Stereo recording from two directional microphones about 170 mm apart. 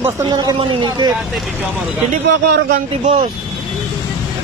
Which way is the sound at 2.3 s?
80° right.